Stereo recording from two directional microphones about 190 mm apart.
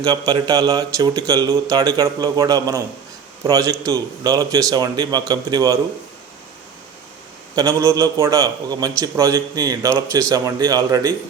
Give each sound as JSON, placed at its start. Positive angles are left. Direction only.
{"t": 0.0, "sound": "speech", "side_deg": -20}
{"t": 7.5, "sound": "a man's voice", "side_deg": -20}